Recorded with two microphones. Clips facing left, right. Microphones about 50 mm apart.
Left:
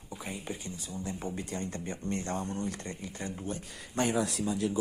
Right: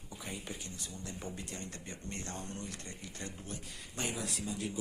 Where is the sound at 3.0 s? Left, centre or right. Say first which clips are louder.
Left 5 dB; left.